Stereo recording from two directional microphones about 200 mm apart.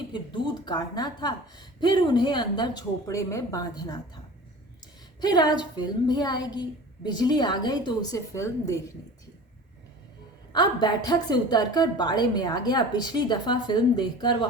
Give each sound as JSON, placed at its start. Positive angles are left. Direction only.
{"t": 0.1, "sound": "a woman's voice", "side_deg": 25}
{"t": 5.2, "sound": "a woman's voice", "side_deg": 20}
{"t": 10.5, "sound": "a woman's voice", "side_deg": 20}